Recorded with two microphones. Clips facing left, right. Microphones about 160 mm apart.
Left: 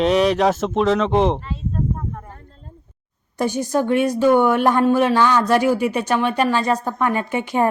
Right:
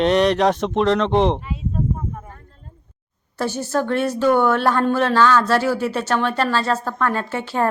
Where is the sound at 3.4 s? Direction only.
15° left (ahead or behind).